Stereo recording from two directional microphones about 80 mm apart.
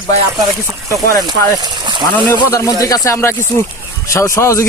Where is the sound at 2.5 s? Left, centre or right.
Left.